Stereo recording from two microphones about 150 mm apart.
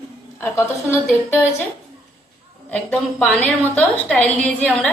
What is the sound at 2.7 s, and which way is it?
A woman's voice, 10° left (ahead or behind).